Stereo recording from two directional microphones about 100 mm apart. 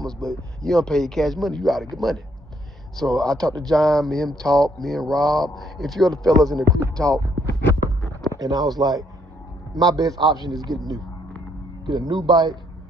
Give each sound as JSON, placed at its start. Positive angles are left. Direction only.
{"t": 0.0, "sound": "speech", "side_deg": 5}
{"t": 3.0, "sound": "speech", "side_deg": 5}
{"t": 7.1, "sound": "a man's voice", "side_deg": -35}
{"t": 11.8, "sound": "speech", "side_deg": -45}